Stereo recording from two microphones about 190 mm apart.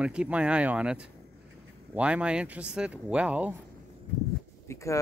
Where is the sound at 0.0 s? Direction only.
5° right (ahead or behind).